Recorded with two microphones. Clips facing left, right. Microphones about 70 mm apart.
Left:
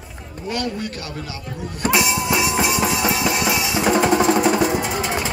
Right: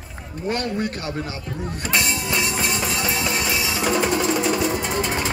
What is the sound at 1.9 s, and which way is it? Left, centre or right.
Music, centre.